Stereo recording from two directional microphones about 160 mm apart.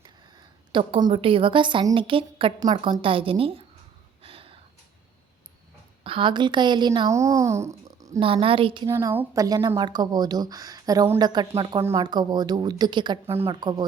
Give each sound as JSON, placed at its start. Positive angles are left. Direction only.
{"t": 0.0, "sound": "a woman's voice", "side_deg": -30}
{"t": 4.2, "sound": "a sound", "side_deg": -35}
{"t": 6.0, "sound": "speech", "side_deg": -35}
{"t": 7.1, "sound": "speech", "side_deg": -20}
{"t": 8.2, "sound": "a woman's voice", "side_deg": -35}
{"t": 8.9, "sound": "a woman's voice", "side_deg": -15}
{"t": 11.8, "sound": "speech", "side_deg": -15}
{"t": 12.0, "sound": "speech", "side_deg": -25}